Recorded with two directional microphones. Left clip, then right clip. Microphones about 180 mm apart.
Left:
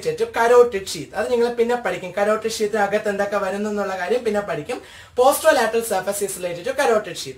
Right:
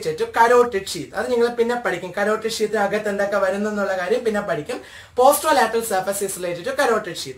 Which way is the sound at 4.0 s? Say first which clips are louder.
Even; 15° left (ahead or behind).